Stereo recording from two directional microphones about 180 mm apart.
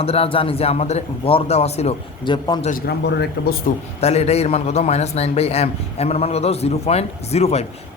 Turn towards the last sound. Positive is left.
turn(degrees=35)  # may be behind; listen again after turning